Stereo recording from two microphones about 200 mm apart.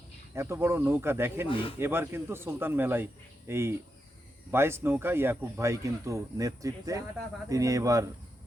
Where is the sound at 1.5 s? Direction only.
25° left (ahead or behind).